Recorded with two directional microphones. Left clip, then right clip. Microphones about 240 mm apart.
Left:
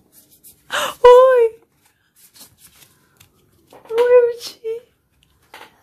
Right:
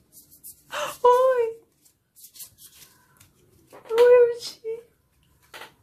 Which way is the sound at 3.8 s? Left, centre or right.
Left.